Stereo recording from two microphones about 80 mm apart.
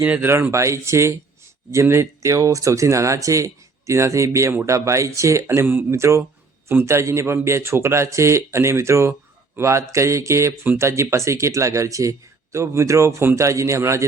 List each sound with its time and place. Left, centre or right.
0.0 s speech: centre
0.5 s speech: right